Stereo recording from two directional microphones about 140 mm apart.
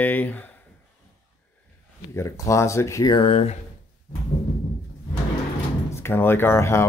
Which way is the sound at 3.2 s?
45° left (ahead or behind).